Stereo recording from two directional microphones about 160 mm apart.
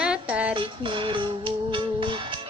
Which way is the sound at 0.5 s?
30° right (ahead or behind).